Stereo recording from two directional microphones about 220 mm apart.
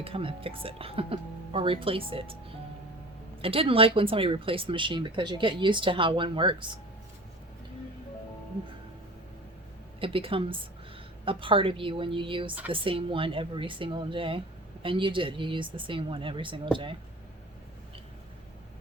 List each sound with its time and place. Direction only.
0.0 s speech: 25° right (ahead or behind)
3.4 s speech: 25° right (ahead or behind)
10.0 s speech: 25° right (ahead or behind)